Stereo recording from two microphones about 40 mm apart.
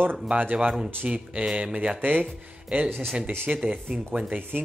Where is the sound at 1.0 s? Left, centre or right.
Right.